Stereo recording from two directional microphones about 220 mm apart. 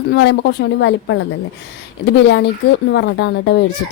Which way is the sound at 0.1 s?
50° left (ahead or behind).